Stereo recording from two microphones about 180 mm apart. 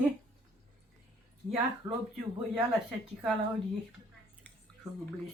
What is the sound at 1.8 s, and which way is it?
Speech, 20° right (ahead or behind).